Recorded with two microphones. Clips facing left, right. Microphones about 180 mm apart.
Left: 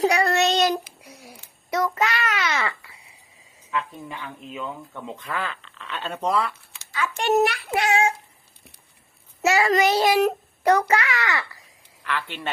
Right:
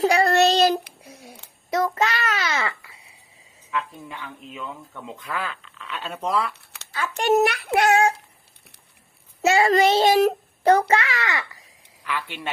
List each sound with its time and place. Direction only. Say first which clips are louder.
0.1 s child singing: right 3 dB; 35° right (ahead or behind)
0.9 s a sound: right 1 dB; 25° right (ahead or behind)
1.7 s a child's voice: right 1 dB; 25° right (ahead or behind)
4.5 s speech: left 3 dB; centre (ahead or behind)
6.5 s a sound: right 1 dB; 65° right (ahead or behind)
7.2 s a child's voice: right 2 dB; 45° right (ahead or behind)
9.5 s a child's voice: right 2 dB; 25° right (ahead or behind)
12.0 s speech: left 1 dB; 10° right (ahead or behind)